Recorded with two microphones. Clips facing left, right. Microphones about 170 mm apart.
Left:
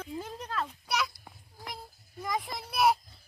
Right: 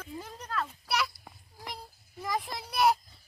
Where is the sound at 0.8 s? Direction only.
5° right (ahead or behind).